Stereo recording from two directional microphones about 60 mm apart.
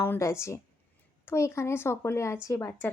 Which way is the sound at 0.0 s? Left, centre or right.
Left.